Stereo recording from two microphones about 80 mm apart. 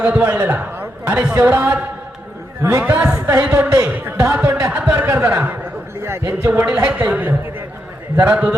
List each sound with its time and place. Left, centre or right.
0.0 s a man's voice: centre
6.0 s a man's voice: right
6.5 s speech: centre